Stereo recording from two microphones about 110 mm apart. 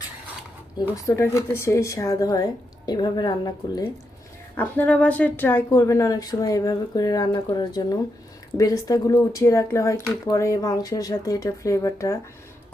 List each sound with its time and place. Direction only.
1.0 s speech: 25° left (ahead or behind)
4.5 s a woman's voice: 15° left (ahead or behind)
5.8 s speech: 30° left (ahead or behind)